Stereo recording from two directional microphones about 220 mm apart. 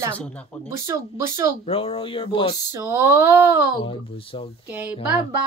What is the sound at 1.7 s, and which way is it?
Speech, 25° left (ahead or behind).